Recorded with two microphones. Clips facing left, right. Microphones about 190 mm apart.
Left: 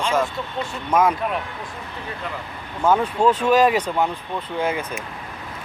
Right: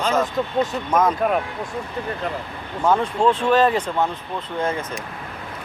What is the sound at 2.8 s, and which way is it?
Speech, 5° left (ahead or behind).